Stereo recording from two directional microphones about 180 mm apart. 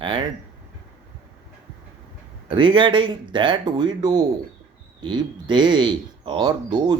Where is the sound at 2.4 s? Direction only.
30° right (ahead or behind).